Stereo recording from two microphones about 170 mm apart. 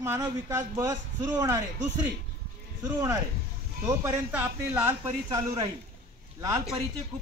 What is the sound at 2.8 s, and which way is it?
Speech, 25° right (ahead or behind).